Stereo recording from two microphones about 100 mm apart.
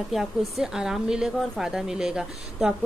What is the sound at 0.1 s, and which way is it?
A woman's voice, centre (ahead or behind).